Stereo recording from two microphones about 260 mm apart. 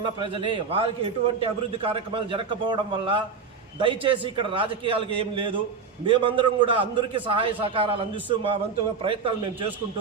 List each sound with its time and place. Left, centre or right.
0.0 s a man's voice: centre